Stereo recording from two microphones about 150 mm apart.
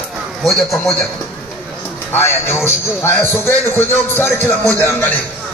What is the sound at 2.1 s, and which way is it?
A man's voice, 15° left (ahead or behind).